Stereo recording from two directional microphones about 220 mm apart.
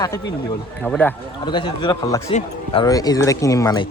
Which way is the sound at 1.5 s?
20° left (ahead or behind).